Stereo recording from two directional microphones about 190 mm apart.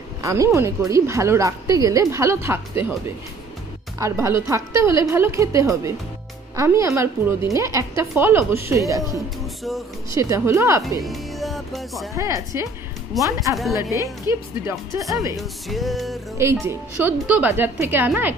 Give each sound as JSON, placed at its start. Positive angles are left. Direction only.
{"t": 0.2, "sound": "a woman's voice", "side_deg": -15}
{"t": 4.0, "sound": "a woman's voice", "side_deg": -15}
{"t": 9.4, "sound": "music", "side_deg": 0}
{"t": 10.1, "sound": "a woman's voice", "side_deg": -15}
{"t": 11.0, "sound": "speech", "side_deg": 0}
{"t": 12.2, "sound": "a woman's voice", "side_deg": -15}
{"t": 15.3, "sound": "music", "side_deg": 0}
{"t": 16.6, "sound": "a woman's voice", "side_deg": -10}